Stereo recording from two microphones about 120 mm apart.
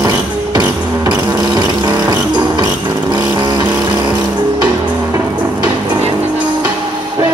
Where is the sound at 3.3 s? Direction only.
35° right (ahead or behind).